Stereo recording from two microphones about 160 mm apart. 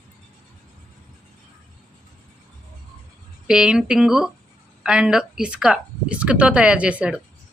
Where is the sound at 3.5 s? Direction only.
5° right (ahead or behind).